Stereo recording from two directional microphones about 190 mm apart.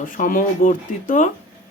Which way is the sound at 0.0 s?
45° left (ahead or behind).